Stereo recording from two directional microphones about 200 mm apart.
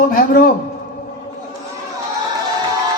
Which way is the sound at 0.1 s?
45° left (ahead or behind).